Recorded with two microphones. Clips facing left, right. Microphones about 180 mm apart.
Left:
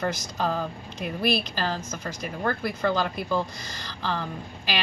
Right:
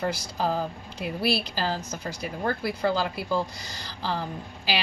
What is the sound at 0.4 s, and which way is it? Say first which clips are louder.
A woman's voice: right 1 dB; 10° right (ahead or behind).